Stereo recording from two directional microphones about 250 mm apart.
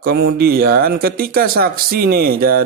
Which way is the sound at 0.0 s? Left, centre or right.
Right.